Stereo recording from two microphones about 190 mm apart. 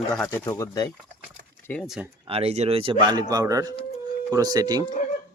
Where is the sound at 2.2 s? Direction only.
30° right (ahead or behind).